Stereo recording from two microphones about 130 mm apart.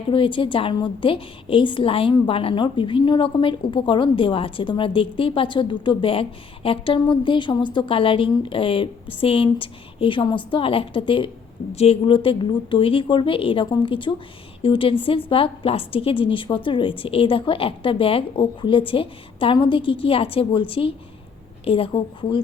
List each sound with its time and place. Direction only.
0.1 s a woman's voice: 40° left (ahead or behind)
11.7 s a woman's voice: 50° left (ahead or behind)